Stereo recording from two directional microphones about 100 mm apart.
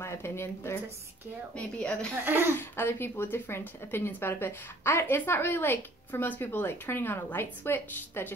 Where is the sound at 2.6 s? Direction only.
25° left (ahead or behind).